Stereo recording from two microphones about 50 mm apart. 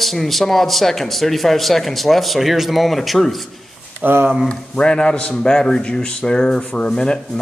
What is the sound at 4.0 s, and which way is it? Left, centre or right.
Speech, right.